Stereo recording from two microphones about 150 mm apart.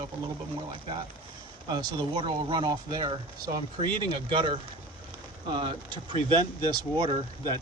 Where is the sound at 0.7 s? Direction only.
35° right (ahead or behind).